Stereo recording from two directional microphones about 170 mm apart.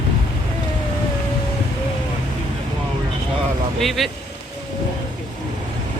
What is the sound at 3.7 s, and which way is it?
Vehicle, centre (ahead or behind).